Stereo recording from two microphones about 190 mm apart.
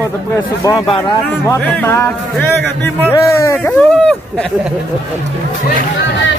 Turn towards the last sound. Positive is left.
turn(degrees=10)  # may be behind; listen again after turning